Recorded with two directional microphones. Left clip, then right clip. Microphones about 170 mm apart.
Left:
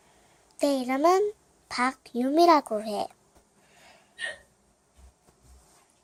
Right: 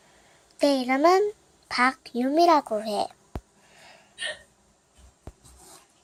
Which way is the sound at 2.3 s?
20° left (ahead or behind).